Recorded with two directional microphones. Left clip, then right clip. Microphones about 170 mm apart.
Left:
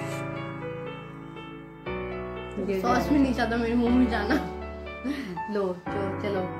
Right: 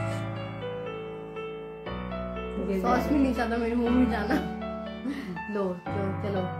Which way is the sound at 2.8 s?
10° right (ahead or behind).